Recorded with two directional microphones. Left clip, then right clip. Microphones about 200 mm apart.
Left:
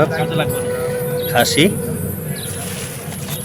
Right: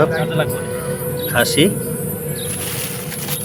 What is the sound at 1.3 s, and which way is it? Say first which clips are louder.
Speech: left 1 dB; centre (ahead or behind).